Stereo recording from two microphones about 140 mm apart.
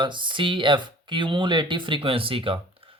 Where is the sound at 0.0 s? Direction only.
35° right (ahead or behind).